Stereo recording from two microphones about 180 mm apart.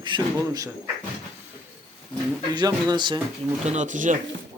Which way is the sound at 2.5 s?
25° right (ahead or behind).